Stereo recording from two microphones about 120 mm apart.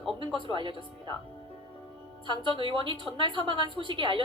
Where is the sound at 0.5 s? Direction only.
45° right (ahead or behind).